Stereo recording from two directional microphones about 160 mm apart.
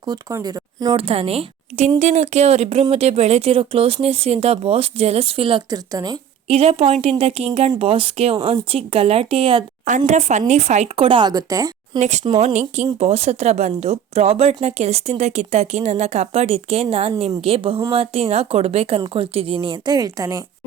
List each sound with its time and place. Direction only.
0.0 s speech: 25° right (ahead or behind)
0.9 s speech: 35° right (ahead or behind)
6.5 s speech: 40° right (ahead or behind)
10.1 s speech: 45° right (ahead or behind); by 11.7 s 20° right (ahead or behind)
11.9 s speech: 45° right (ahead or behind); by 20.4 s 20° right (ahead or behind)